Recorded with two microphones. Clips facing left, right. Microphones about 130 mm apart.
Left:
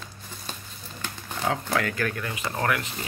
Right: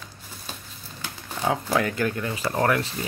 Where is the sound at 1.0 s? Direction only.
10° right (ahead or behind).